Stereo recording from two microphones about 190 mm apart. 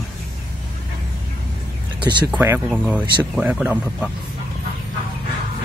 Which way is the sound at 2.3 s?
10° right (ahead or behind).